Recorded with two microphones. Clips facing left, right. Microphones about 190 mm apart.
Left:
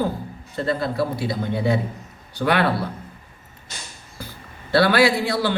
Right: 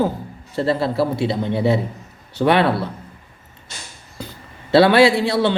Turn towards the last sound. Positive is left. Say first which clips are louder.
# right 4 dB
turn(degrees=-25)  # may be behind; listen again after turning